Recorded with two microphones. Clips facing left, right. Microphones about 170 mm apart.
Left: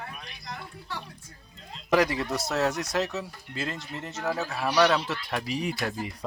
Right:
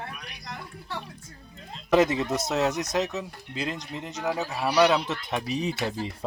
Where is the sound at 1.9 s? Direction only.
20° right (ahead or behind).